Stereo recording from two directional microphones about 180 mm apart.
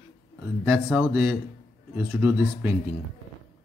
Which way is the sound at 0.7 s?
Centre (ahead or behind).